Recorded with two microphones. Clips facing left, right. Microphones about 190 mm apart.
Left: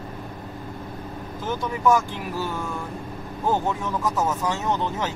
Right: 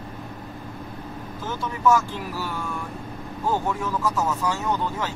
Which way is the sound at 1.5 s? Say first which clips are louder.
Left 1 dB; 15° left (ahead or behind).